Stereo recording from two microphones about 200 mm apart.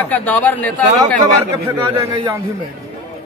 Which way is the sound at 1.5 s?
15° right (ahead or behind).